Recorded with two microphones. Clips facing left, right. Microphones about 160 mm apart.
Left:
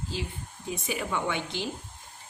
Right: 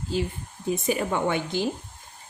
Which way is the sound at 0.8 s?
45° right (ahead or behind).